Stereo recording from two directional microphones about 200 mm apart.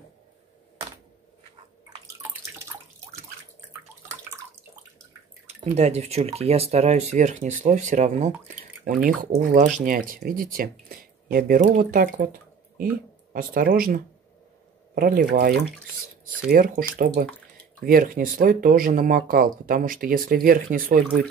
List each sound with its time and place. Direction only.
5.8 s speech: 35° right (ahead or behind)